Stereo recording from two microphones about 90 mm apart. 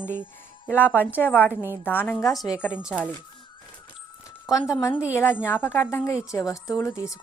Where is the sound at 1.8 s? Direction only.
20° left (ahead or behind).